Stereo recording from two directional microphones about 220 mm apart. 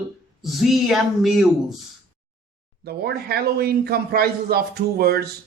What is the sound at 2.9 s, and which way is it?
A man's voice, 45° right (ahead or behind).